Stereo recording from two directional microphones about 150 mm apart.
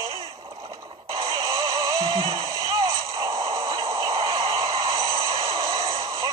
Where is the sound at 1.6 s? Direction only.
20° right (ahead or behind).